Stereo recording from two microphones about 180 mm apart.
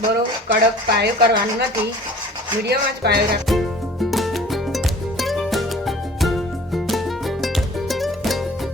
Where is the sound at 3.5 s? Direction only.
Centre (ahead or behind).